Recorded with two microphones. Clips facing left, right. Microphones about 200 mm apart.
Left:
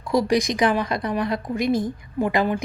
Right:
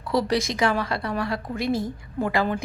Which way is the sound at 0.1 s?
15° left (ahead or behind).